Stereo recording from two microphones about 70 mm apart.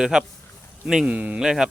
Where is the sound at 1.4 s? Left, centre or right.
Centre.